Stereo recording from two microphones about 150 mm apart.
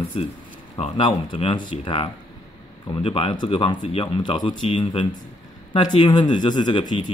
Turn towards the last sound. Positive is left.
turn(degrees=35)  # may be behind; listen again after turning